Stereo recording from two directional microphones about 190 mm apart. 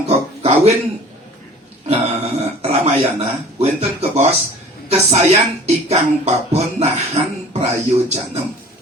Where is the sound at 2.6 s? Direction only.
35° right (ahead or behind).